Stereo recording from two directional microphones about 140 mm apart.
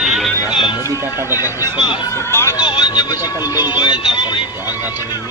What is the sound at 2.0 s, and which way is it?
Speech, 20° left (ahead or behind).